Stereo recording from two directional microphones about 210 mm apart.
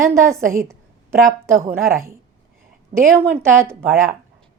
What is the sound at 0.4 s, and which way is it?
Speech, 40° right (ahead or behind).